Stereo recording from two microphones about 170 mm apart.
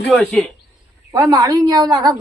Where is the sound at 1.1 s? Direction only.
20° right (ahead or behind).